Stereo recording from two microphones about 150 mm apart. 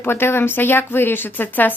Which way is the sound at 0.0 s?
15° left (ahead or behind).